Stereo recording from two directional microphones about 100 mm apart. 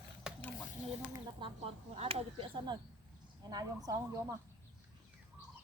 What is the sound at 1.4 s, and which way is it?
Speech, 55° right (ahead or behind).